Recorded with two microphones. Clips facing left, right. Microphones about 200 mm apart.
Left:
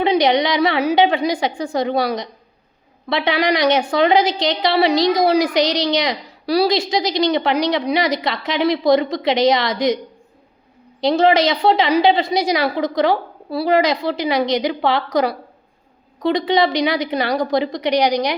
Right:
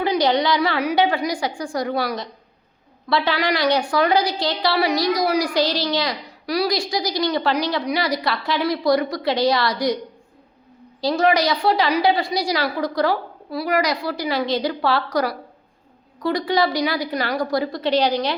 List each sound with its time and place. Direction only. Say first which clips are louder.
0.0 s a woman's voice: left 3 dB; 20° left (ahead or behind)
11.0 s a woman's voice: left 4 dB; 25° left (ahead or behind)